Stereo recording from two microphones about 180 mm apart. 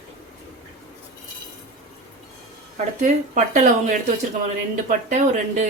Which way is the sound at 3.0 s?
45° right (ahead or behind).